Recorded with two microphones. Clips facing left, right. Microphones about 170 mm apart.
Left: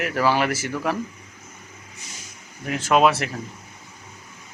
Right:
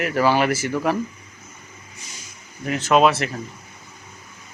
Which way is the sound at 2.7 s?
10° left (ahead or behind).